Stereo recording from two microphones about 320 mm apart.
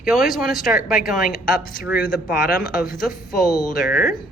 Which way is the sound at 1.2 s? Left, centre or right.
Left.